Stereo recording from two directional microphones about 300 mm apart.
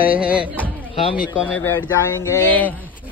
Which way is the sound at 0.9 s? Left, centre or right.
Centre.